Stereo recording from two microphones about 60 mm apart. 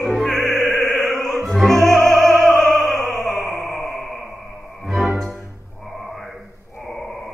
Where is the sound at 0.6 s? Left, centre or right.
Left.